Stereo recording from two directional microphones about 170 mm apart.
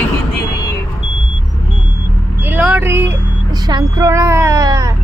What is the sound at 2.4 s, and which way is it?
Speech, 10° right (ahead or behind).